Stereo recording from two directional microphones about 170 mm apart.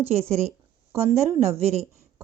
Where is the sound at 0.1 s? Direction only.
40° right (ahead or behind).